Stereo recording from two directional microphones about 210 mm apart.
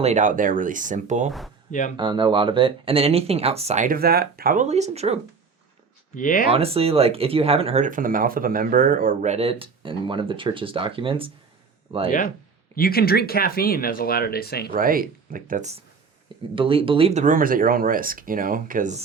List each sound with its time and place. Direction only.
0.0 s speech: 35° right (ahead or behind)
2.0 s speech: 20° right (ahead or behind)
6.1 s speech: 40° left (ahead or behind)
6.5 s speech: 30° right (ahead or behind)
12.7 s speech: 45° left (ahead or behind)
14.7 s speech: 45° right (ahead or behind)
16.6 s speech: 25° right (ahead or behind)